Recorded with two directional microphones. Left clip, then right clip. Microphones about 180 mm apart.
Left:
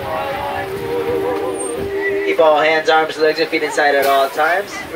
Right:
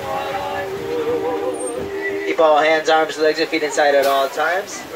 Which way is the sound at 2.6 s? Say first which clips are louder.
Left 1 dB; 40° right (ahead or behind).